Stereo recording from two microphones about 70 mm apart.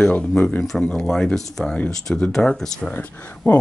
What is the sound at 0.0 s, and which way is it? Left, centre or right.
Speech, centre.